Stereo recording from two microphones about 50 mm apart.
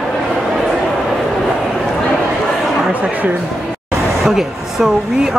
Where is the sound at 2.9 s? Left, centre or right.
Right.